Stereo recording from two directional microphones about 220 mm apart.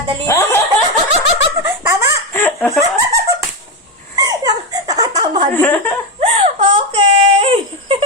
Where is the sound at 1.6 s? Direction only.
10° right (ahead or behind).